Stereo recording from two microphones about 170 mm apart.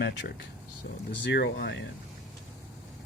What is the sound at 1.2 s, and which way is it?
Speech, 85° left.